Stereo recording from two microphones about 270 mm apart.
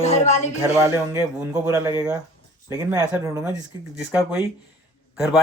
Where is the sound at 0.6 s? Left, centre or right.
Centre.